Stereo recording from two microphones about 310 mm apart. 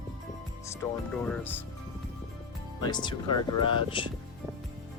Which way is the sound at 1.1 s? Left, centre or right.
Centre.